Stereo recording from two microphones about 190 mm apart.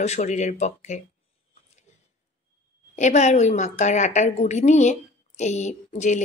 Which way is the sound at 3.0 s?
35° left (ahead or behind).